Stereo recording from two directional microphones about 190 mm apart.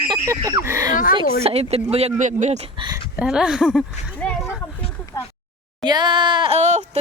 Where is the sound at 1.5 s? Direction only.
30° right (ahead or behind).